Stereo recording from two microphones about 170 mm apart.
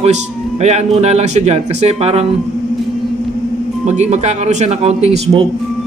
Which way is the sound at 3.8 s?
45° right (ahead or behind).